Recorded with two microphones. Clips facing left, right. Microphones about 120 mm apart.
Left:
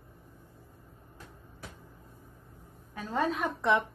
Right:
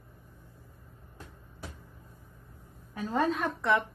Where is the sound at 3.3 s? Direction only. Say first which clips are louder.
Even; 15° left (ahead or behind).